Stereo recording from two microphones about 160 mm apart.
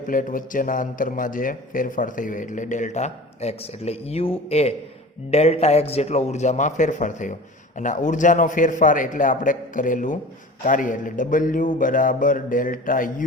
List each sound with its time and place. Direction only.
0.1 s a man's voice: 60° left (ahead or behind)